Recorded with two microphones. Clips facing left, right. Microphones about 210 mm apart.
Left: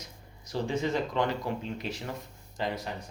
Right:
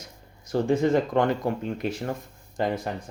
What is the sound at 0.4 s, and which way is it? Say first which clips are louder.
Speech: right 8 dB; 50° right (ahead or behind).